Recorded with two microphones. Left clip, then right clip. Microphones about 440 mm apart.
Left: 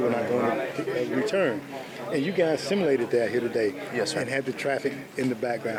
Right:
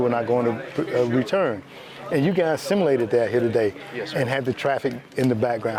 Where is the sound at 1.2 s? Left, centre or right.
Right.